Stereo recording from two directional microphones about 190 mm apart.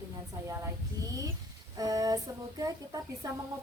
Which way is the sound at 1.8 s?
20° right (ahead or behind).